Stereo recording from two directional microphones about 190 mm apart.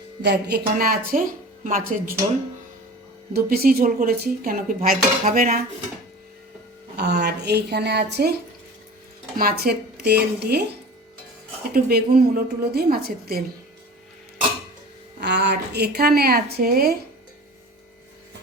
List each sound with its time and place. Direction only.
0.2 s speech: 60° right (ahead or behind)
3.3 s speech: 50° right (ahead or behind)
6.9 s a woman's voice: 60° right (ahead or behind)
9.4 s a woman's voice: 55° right (ahead or behind)
11.7 s a woman's voice: 55° right (ahead or behind)
15.2 s a woman's voice: 65° right (ahead or behind)